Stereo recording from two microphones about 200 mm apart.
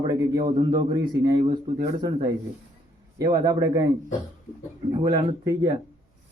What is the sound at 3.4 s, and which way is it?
Speech, 15° right (ahead or behind).